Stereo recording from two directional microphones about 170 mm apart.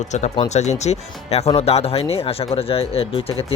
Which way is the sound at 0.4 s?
40° left (ahead or behind).